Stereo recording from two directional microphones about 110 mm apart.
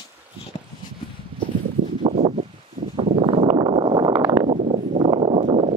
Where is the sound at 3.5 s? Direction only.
50° right (ahead or behind).